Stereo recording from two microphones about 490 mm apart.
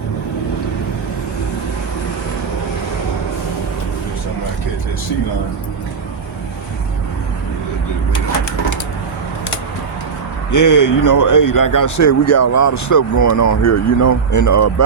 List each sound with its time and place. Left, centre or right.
10.5 s a man's voice: left